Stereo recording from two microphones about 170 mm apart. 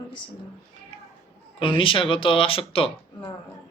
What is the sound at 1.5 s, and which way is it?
Speech, 30° left (ahead or behind).